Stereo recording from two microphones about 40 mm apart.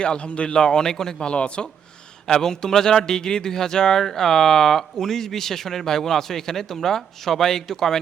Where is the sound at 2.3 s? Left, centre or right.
Centre.